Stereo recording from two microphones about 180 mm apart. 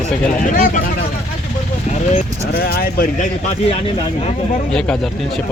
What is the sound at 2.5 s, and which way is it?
Speech, 55° left (ahead or behind).